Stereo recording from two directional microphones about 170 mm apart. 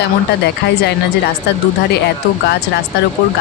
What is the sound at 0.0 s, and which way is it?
Speech, 80° left.